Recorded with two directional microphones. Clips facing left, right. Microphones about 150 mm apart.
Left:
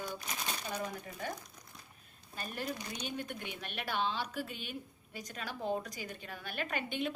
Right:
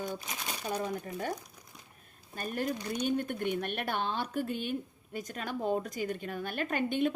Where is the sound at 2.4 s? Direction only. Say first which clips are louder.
Right 6 dB; 45° right (ahead or behind).